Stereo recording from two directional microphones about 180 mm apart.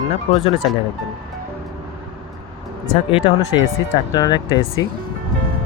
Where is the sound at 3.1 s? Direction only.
30° left (ahead or behind).